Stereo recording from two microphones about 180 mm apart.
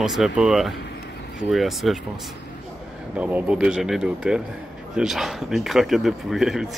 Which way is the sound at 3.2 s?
5° right (ahead or behind).